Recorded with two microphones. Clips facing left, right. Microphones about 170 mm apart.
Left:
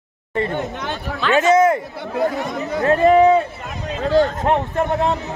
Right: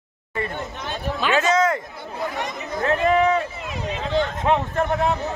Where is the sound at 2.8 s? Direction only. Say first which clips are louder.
Left 6 dB; 35° left (ahead or behind).